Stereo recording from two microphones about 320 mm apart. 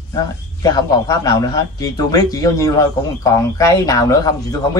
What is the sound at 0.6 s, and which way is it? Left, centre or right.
A man's voice, centre.